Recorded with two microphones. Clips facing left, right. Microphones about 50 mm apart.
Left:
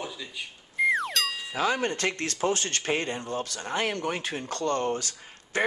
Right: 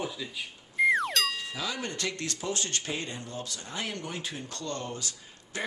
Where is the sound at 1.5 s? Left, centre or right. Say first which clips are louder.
Left 8 dB; left.